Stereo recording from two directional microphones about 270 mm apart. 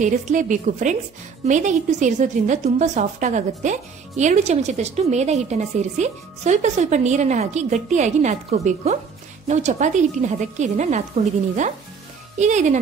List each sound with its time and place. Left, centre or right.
0.0 s a woman's voice: right